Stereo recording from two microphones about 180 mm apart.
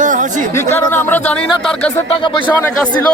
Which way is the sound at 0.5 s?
10° left (ahead or behind).